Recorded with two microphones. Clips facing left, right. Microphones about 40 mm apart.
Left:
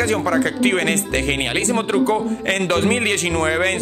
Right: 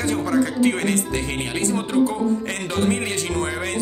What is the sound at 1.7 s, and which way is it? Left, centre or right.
Speech, left.